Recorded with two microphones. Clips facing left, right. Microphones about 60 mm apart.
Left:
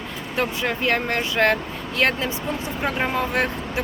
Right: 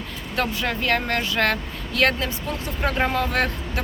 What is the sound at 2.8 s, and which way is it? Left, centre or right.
Speech, centre.